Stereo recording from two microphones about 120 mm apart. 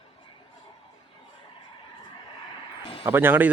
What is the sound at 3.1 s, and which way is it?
Speech, 15° right (ahead or behind).